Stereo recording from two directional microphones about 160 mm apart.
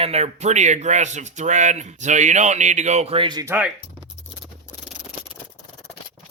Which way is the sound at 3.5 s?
10° right (ahead or behind).